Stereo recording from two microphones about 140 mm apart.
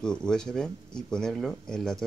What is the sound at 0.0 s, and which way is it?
Speech, 5° left (ahead or behind).